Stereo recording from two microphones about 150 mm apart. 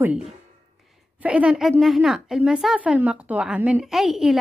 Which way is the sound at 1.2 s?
10° right (ahead or behind).